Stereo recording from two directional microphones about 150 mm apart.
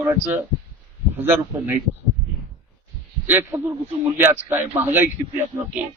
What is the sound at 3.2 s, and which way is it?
A man's voice, 15° right (ahead or behind).